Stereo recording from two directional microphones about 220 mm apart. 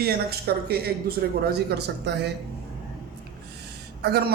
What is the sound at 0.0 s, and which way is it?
A man's voice, 45° right (ahead or behind).